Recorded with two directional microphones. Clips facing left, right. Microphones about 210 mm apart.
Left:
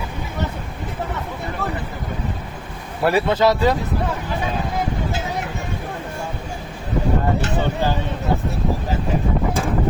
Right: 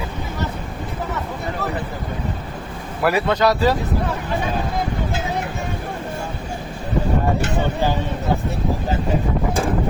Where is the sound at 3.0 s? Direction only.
25° left (ahead or behind).